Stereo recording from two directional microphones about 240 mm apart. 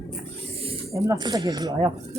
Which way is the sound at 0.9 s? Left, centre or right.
Centre.